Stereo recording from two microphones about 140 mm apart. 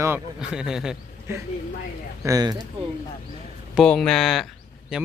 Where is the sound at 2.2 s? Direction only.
25° right (ahead or behind).